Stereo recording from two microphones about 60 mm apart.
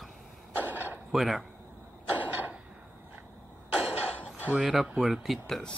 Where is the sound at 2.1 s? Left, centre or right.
Right.